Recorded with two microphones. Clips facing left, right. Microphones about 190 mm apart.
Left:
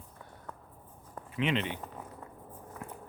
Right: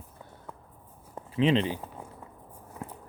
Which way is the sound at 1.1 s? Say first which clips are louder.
Right 7 dB; 30° right (ahead or behind).